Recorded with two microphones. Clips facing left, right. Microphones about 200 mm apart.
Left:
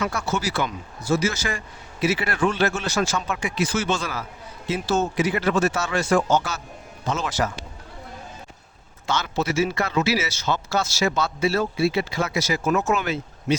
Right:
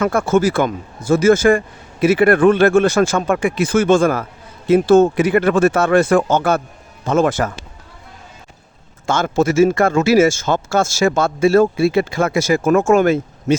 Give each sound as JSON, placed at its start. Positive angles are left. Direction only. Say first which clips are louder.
{"t": 0.0, "sound": "a man's voice", "louder": "right 11 dB", "side_deg": -50}
{"t": 9.0, "sound": "speech", "louder": "right 8 dB", "side_deg": -50}